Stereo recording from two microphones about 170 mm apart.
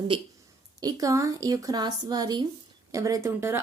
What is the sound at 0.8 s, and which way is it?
Speech, 20° right (ahead or behind).